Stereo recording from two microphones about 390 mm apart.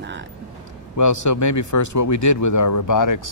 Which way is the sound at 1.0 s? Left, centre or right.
Left.